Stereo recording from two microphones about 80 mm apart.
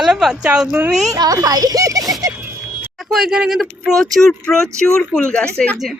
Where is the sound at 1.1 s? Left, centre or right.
Right.